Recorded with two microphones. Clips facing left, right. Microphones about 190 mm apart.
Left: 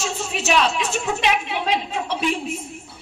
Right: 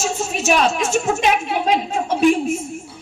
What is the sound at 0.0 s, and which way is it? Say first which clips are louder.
A woman's voice: right 4 dB; 45° right (ahead or behind).